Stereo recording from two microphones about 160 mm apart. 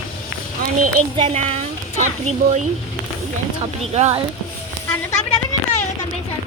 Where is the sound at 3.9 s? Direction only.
40° right (ahead or behind).